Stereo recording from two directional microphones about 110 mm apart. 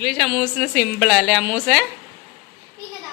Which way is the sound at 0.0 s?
Centre (ahead or behind).